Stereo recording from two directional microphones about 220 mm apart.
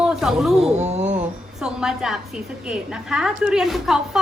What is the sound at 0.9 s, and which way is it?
Speech, 30° right (ahead or behind).